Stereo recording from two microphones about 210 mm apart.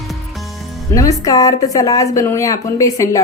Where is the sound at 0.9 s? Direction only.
15° left (ahead or behind).